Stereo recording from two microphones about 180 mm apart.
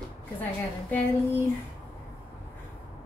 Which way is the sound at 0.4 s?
10° left (ahead or behind).